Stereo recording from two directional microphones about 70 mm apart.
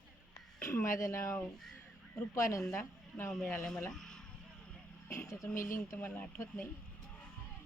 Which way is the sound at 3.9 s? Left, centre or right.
Centre.